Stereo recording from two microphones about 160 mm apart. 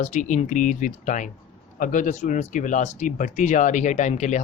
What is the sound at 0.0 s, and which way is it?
Speech, 50° left (ahead or behind).